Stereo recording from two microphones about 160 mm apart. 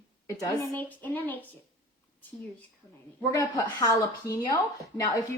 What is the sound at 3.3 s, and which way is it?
Speech, 20° left (ahead or behind).